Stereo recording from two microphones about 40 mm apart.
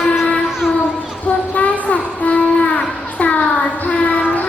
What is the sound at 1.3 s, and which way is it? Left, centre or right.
Child singing, left.